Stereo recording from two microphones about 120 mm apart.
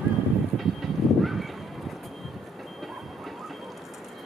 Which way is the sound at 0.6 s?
Centre (ahead or behind).